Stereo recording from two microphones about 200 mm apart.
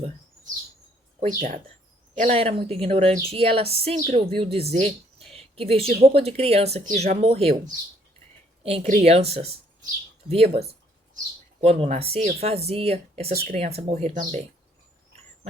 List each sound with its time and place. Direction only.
1.4 s a woman's voice: 35° right (ahead or behind)
8.6 s speech: 30° right (ahead or behind)
10.2 s a sound: 30° right (ahead or behind)
11.6 s speech: 30° right (ahead or behind)